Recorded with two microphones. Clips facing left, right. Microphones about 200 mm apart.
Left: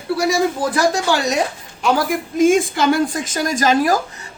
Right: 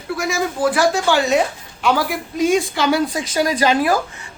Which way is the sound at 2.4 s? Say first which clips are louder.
Left 3 dB; 50° left (ahead or behind).